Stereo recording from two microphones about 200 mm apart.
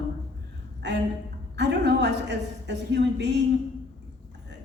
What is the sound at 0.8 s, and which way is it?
A woman's voice, 60° right (ahead or behind).